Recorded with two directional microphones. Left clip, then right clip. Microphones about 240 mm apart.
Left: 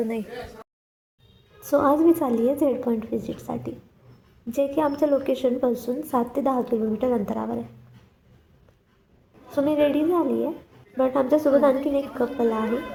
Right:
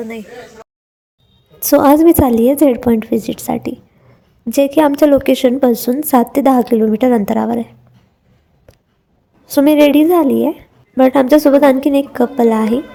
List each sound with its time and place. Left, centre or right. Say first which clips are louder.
0.0 s speech: right 2 dB; centre
1.5 s a woman's voice: right 11 dB; right
9.6 s a woman's voice: right 12 dB; right